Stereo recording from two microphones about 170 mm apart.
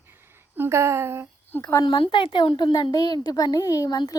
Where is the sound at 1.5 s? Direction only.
10° left (ahead or behind).